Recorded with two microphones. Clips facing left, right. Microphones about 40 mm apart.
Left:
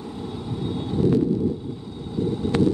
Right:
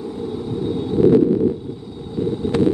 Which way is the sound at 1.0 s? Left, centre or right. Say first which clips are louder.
Right 7 dB; right.